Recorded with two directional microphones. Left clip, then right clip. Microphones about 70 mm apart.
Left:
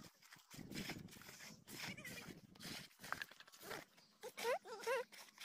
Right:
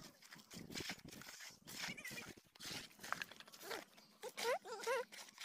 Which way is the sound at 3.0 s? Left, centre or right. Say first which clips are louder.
Right 2 dB; left.